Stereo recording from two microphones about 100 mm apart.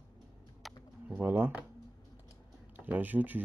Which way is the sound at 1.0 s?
15° right (ahead or behind).